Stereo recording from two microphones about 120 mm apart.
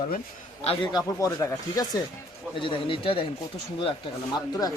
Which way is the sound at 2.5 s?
45° left (ahead or behind).